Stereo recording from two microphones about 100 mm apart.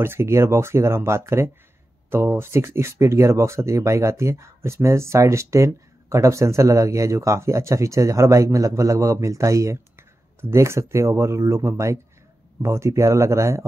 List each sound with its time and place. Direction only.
0.0 s speech: 25° right (ahead or behind)